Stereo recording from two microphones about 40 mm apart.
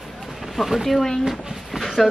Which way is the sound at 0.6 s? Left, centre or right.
Centre.